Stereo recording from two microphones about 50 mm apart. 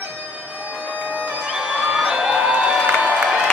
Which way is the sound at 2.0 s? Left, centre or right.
Centre.